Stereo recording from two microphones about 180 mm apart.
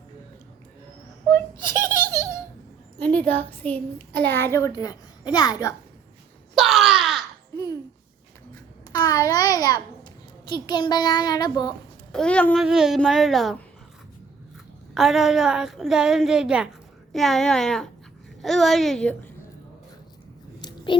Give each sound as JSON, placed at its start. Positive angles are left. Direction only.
{"t": 1.8, "sound": "baby laughter", "side_deg": 15}
{"t": 3.0, "sound": "a woman's voice", "side_deg": 10}
{"t": 6.6, "sound": "a sound", "side_deg": 0}
{"t": 7.5, "sound": "babbling", "side_deg": 20}
{"t": 8.9, "sound": "a sound", "side_deg": 20}
{"t": 12.1, "sound": "a woman's voice", "side_deg": 5}
{"t": 14.9, "sound": "a woman's voice", "side_deg": 0}
{"t": 20.6, "sound": "whispering", "side_deg": 25}